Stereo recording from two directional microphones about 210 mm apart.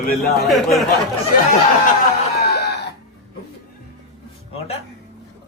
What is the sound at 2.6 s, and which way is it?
Cough, 50° left (ahead or behind).